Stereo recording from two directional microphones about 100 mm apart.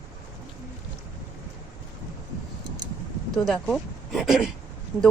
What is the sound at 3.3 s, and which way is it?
Speech, 5° left (ahead or behind).